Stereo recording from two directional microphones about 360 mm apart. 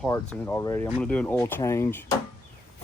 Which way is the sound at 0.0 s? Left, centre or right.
Centre.